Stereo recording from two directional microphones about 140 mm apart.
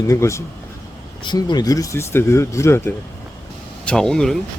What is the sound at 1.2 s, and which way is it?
Speech, 30° left (ahead or behind).